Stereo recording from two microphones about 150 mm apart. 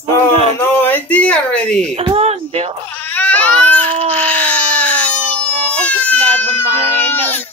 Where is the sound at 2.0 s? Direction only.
40° right (ahead or behind).